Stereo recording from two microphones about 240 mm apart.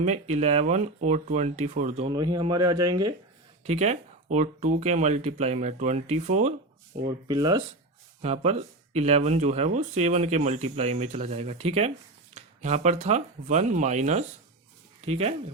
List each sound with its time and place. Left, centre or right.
0.0 s speech: right
3.6 s speech: right
7.3 s speech: centre
8.2 s speech: right